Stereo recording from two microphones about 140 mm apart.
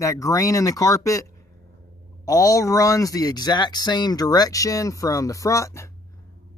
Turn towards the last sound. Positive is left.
turn(degrees=20)  # may be behind; listen again after turning